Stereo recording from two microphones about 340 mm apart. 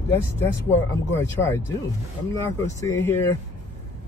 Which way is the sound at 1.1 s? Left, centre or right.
Centre.